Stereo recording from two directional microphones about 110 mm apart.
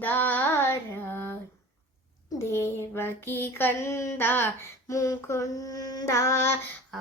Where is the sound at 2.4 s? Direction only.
25° left (ahead or behind).